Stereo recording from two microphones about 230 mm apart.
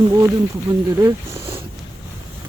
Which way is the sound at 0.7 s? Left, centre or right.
Right.